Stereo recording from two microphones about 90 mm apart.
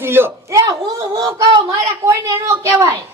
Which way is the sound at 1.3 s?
45° right (ahead or behind).